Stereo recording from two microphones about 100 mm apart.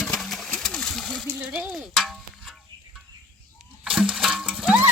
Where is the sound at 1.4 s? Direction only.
15° right (ahead or behind).